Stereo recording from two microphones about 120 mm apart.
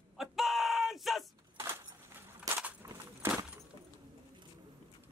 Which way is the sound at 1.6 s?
20° right (ahead or behind).